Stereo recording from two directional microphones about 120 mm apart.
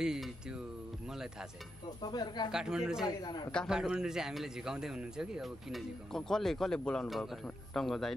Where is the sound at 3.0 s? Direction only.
35° left (ahead or behind).